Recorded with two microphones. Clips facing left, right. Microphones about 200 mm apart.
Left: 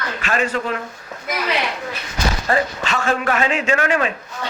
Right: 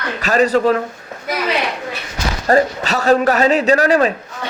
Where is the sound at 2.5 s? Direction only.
40° right (ahead or behind).